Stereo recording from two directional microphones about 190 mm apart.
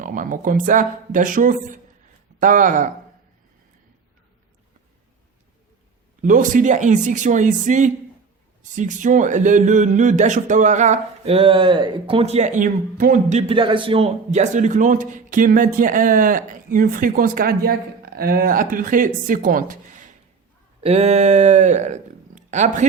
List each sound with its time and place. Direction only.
0.0 s speech: 45° right (ahead or behind)
6.2 s speech: 45° right (ahead or behind)
13.5 s speech: 25° right (ahead or behind); by 19.7 s 45° right (ahead or behind)
20.8 s speech: 35° right (ahead or behind)